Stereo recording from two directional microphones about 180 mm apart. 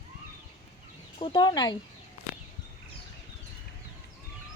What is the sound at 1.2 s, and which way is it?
Speech, 25° left (ahead or behind).